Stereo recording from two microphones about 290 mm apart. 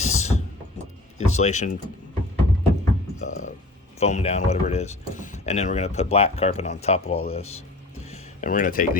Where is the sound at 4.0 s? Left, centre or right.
Left.